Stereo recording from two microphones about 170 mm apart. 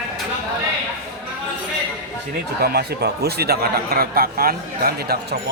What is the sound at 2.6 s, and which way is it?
Speech, 65° right (ahead or behind).